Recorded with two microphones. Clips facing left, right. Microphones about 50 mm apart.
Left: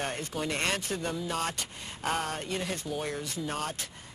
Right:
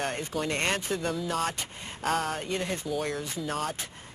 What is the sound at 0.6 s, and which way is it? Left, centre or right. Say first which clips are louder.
Speech: right 2 dB; centre.